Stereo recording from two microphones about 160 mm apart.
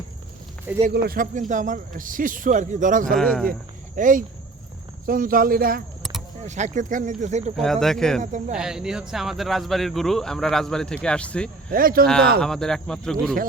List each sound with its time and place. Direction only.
0.7 s speech: 10° right (ahead or behind)
1.0 s a man's voice: 60° right (ahead or behind)
3.2 s speech: centre (ahead or behind)
3.9 s a man's voice: 55° right (ahead or behind)
6.0 s vehicle: centre (ahead or behind)
6.4 s speech: 45° right (ahead or behind)
7.5 s speech: centre (ahead or behind)
8.2 s speech: 50° right (ahead or behind)
8.5 s speech: 5° right (ahead or behind)
11.7 s a man's voice: 65° right (ahead or behind)
12.4 s speech: 5° left (ahead or behind)